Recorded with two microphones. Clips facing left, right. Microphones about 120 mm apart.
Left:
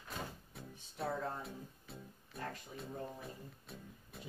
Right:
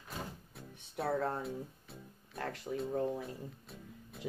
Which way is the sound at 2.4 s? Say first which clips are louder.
Right 6 dB; 85° right.